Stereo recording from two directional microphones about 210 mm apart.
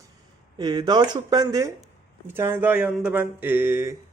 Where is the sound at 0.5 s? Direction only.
20° right (ahead or behind).